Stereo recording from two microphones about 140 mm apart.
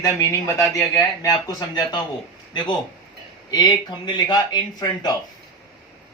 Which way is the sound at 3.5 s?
30° left (ahead or behind).